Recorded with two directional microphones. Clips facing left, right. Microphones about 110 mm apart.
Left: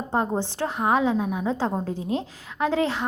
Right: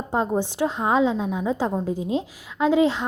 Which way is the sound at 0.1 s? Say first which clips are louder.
Right 2 dB; 15° right (ahead or behind).